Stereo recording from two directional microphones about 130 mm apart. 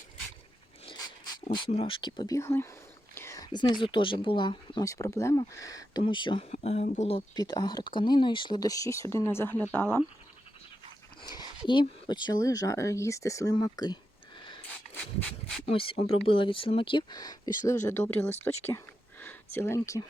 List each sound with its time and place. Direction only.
1.5 s speech: 40° left (ahead or behind)
4.9 s speech: 25° left (ahead or behind)
6.5 s speech: 60° left (ahead or behind)
7.3 s speech: 30° left (ahead or behind)
11.2 s dog: 30° left (ahead or behind)
11.7 s speech: 35° left (ahead or behind)
15.6 s speech: 45° left (ahead or behind); by 18.3 s 15° left (ahead or behind)
19.2 s a sound: 15° left (ahead or behind)